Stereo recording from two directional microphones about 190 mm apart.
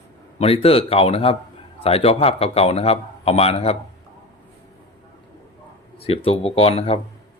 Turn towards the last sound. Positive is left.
turn(degrees=30)  # may be behind; listen again after turning